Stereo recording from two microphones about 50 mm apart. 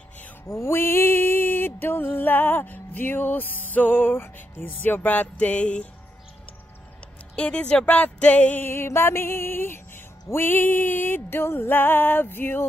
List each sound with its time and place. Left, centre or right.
0.5 s mantra: left
4.6 s music: left
7.3 s speech: left
8.5 s mantra: left
10.3 s music: left